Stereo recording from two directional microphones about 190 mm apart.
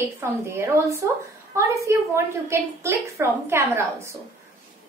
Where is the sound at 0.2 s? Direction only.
15° right (ahead or behind).